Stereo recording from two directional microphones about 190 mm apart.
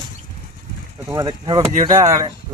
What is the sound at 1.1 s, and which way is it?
Speech, 20° right (ahead or behind).